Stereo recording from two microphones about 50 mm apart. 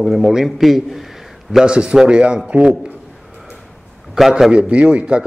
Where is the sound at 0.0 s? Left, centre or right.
Centre.